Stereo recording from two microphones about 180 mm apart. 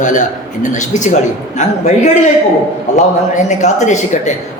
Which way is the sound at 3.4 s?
40° left (ahead or behind).